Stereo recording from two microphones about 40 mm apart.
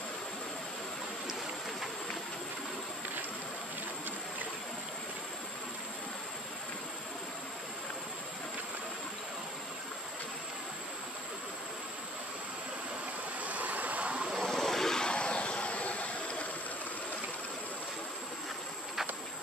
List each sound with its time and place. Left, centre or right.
13.4 s vehicle: right
14.4 s vehicle: centre; by 16.4 s left